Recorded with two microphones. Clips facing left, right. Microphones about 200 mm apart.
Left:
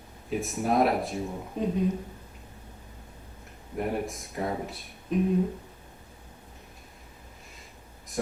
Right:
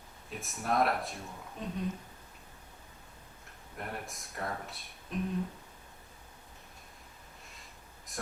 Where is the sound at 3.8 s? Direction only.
5° left (ahead or behind).